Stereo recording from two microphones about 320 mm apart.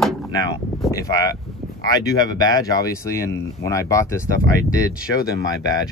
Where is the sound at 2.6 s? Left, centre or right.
Centre.